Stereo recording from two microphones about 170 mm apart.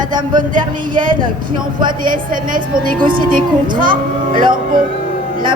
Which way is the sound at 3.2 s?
55° right (ahead or behind).